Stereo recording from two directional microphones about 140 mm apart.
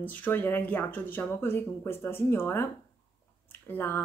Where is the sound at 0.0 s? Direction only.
10° left (ahead or behind).